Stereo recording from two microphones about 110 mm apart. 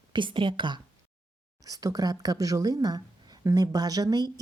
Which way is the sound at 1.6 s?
35° right (ahead or behind).